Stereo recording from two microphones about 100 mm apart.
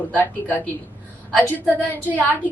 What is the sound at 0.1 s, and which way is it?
A woman's voice, 15° left (ahead or behind).